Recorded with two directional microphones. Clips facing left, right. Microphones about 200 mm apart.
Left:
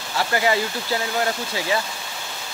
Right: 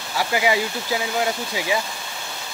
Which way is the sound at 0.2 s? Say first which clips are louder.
Even; 10° right (ahead or behind).